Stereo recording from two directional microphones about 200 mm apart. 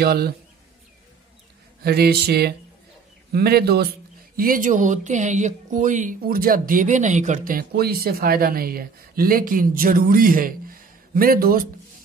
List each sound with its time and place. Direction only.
0.0 s speech: 50° right (ahead or behind)
1.8 s speech: 50° right (ahead or behind)